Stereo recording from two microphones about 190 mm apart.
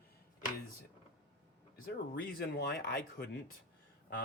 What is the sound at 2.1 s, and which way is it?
Speech, 55° left (ahead or behind).